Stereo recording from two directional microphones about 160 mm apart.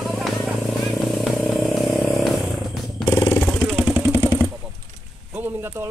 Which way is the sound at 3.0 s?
25° left (ahead or behind).